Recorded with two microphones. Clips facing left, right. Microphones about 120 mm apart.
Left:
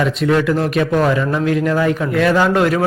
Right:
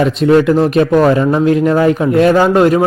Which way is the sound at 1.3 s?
25° right (ahead or behind).